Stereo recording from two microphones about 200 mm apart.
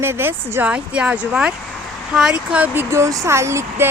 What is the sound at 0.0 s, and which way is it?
Speech, 10° right (ahead or behind).